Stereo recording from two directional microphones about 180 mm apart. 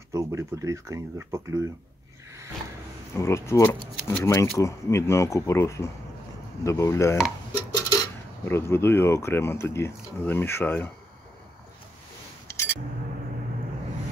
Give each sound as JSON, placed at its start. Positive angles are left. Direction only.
{"t": 0.1, "sound": "speech", "side_deg": -15}
{"t": 3.2, "sound": "speech", "side_deg": 15}
{"t": 12.4, "sound": "a sound", "side_deg": 15}